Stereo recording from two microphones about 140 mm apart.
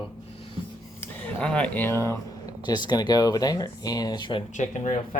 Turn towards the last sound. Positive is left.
turn(degrees=65)  # may be behind; listen again after turning